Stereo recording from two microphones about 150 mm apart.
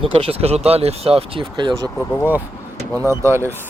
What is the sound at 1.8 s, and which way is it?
Speech, 10° left (ahead or behind).